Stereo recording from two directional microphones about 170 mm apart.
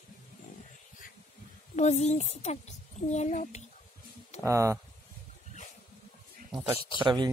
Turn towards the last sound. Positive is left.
turn(degrees=-25)  # may be behind; listen again after turning